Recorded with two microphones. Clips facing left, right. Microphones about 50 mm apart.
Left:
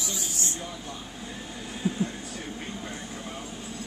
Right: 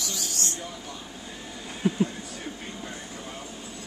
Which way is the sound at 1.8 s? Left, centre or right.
Right.